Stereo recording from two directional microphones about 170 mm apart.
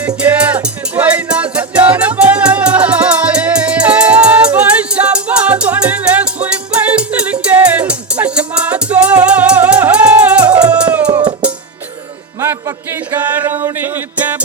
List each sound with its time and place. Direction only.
0.2 s music: 10° right (ahead or behind)
11.2 s music: 30° right (ahead or behind)
12.4 s music: 15° right (ahead or behind)